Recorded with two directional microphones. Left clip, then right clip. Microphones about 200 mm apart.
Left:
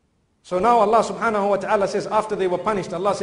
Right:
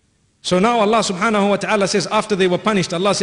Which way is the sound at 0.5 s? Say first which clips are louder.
Right 1 dB; 30° right (ahead or behind).